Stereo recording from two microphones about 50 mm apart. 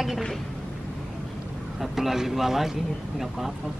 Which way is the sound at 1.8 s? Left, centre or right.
Centre.